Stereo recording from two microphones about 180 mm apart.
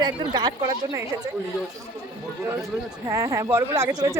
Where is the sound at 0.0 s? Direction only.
25° right (ahead or behind).